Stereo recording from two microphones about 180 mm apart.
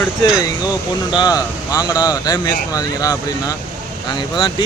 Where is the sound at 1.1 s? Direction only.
20° left (ahead or behind).